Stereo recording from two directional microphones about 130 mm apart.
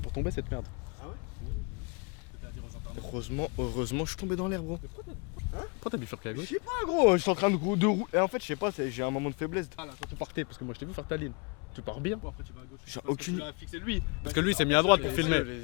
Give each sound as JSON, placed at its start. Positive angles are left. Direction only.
{"t": 0.2, "sound": "speech", "side_deg": 15}
{"t": 3.2, "sound": "speech", "side_deg": 15}